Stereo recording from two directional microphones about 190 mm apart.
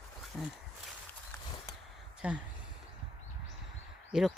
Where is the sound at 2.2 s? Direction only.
5° right (ahead or behind).